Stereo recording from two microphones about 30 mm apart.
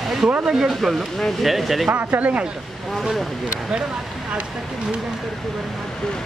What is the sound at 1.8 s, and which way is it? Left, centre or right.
Speech, right.